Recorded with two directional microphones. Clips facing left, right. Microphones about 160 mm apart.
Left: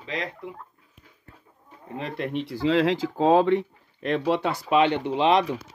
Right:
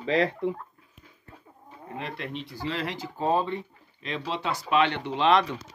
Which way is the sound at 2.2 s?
70° left (ahead or behind).